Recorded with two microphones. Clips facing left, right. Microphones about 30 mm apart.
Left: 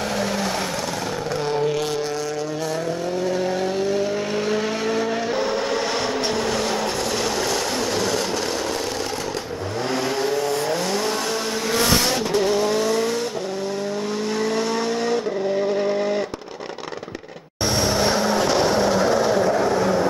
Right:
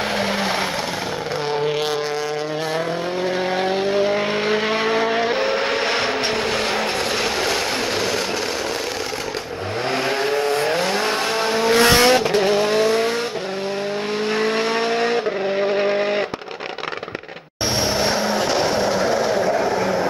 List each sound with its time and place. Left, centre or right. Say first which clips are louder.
0.1 s vehicle: right 2 dB; right
3.3 s vehicle: right 3 dB; right
10.0 s vehicle: right 3 dB; right
14.3 s vehicle: right 3 dB; right
18.0 s vehicle: even; centre